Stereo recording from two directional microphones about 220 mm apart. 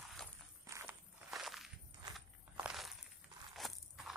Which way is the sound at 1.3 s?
Centre (ahead or behind).